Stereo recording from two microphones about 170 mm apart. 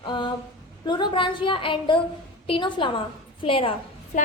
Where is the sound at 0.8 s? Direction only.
25° left (ahead or behind).